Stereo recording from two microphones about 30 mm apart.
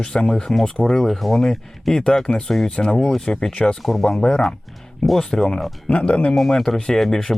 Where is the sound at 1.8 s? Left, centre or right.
Centre.